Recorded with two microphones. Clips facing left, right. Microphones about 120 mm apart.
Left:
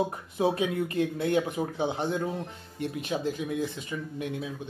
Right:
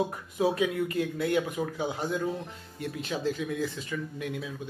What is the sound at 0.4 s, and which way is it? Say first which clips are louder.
Speech: even; 25° left (ahead or behind).